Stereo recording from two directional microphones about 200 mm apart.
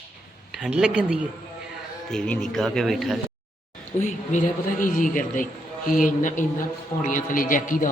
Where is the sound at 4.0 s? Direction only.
40° left (ahead or behind).